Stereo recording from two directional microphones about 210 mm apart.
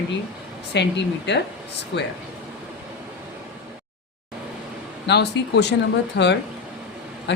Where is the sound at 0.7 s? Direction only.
55° left (ahead or behind).